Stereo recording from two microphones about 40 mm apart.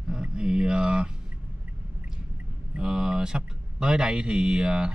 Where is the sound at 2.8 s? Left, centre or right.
Right.